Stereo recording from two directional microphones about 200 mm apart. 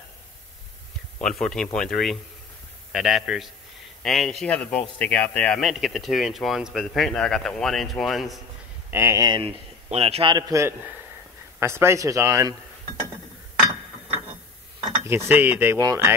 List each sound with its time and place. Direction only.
1.2 s speech: 5° left (ahead or behind)
8.9 s a man's voice: 15° right (ahead or behind)
15.0 s speech: 10° right (ahead or behind)